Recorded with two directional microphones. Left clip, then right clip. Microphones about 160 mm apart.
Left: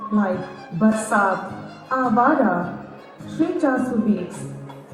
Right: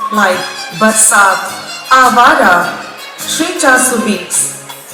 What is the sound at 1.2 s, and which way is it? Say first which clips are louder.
Music: right 11 dB; 10° right (ahead or behind).